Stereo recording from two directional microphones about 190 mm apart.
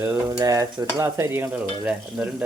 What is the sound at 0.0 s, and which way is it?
Stir, 15° right (ahead or behind).